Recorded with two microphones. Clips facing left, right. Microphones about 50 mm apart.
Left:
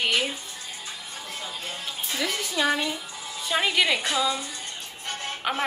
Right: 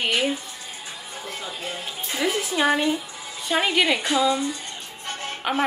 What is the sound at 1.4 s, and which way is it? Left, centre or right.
Music, right.